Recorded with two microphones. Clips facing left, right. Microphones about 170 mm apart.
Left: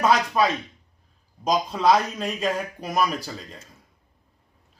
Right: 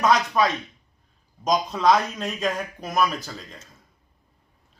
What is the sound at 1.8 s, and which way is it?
Speech, 5° left (ahead or behind).